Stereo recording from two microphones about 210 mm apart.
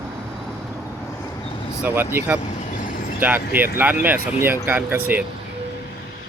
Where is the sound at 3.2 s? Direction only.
10° right (ahead or behind).